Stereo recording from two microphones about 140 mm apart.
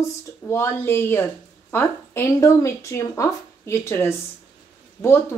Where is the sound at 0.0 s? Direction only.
20° left (ahead or behind).